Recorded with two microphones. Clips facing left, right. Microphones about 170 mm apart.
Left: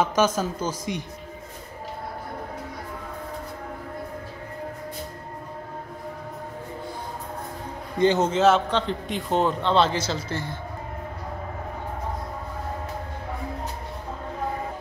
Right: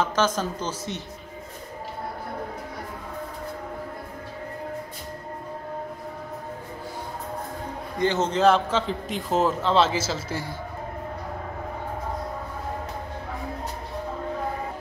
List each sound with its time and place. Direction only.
0.0 s speech: 10° left (ahead or behind)
8.0 s speech: 15° left (ahead or behind)
8.3 s a man's voice: centre (ahead or behind)